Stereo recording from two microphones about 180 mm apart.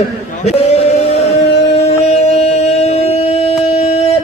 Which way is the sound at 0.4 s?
35° left (ahead or behind).